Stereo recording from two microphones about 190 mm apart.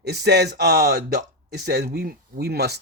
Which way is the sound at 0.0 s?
60° right (ahead or behind).